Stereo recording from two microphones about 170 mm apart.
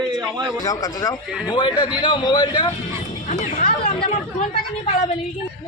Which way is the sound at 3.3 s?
45° left (ahead or behind).